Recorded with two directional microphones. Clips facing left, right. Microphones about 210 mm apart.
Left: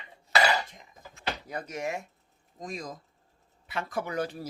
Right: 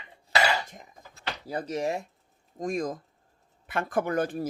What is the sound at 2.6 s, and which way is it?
Speech, 50° right (ahead or behind).